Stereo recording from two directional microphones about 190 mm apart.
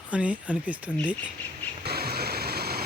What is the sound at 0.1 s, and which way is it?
Speech, 5° right (ahead or behind).